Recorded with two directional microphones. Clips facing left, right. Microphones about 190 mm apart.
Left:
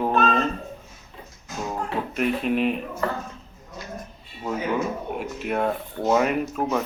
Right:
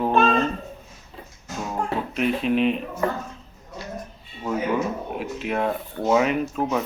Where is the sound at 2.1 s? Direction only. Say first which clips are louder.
Right 1 dB; 5° left (ahead or behind).